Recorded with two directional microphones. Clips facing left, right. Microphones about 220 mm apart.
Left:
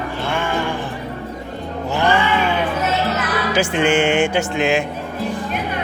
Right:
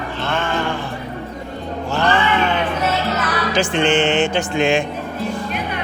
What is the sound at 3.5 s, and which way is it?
Speech, 10° left (ahead or behind).